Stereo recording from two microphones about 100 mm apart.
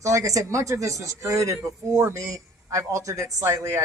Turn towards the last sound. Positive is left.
turn(degrees=-30)  # may be behind; listen again after turning